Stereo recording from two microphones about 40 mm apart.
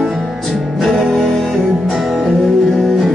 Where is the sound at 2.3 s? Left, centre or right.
Centre.